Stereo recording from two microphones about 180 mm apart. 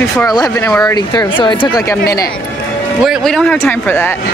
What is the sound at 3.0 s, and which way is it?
Speech, centre (ahead or behind).